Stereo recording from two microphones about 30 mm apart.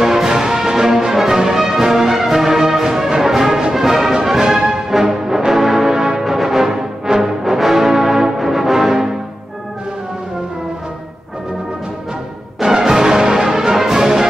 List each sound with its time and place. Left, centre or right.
0.0 s music: centre
12.5 s music: right